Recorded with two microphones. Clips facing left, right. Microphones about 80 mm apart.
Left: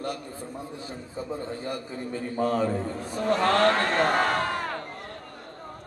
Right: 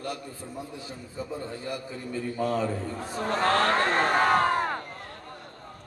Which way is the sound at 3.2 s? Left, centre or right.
Right.